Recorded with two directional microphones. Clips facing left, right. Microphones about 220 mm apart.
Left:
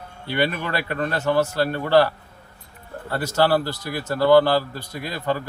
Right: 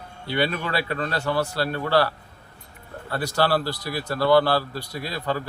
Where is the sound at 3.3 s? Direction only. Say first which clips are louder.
Left 3 dB; 15° left (ahead or behind).